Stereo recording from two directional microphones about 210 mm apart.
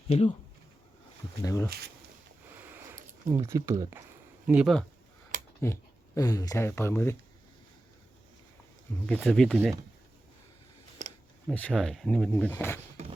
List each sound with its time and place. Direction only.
0.1 s speech: 30° left (ahead or behind)
1.5 s speech: 15° left (ahead or behind)
2.6 s a sound: 10° right (ahead or behind)
3.4 s speech: 15° right (ahead or behind)
5.3 s a sound: 40° right (ahead or behind)
6.1 s speech: 15° left (ahead or behind)
9.0 s speech: 5° left (ahead or behind)
11.4 s speech: 5° left (ahead or behind)